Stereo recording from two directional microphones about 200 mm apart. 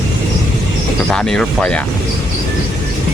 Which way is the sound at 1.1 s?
5° left (ahead or behind).